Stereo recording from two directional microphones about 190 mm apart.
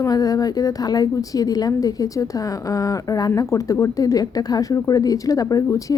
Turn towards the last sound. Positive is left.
turn(degrees=15)  # may be behind; listen again after turning